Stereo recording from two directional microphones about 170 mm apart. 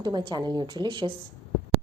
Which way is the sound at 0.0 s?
25° right (ahead or behind).